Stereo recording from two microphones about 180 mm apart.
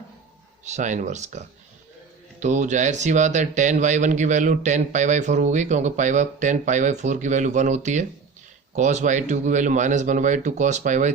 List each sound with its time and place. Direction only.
0.6 s speech: 40° right (ahead or behind)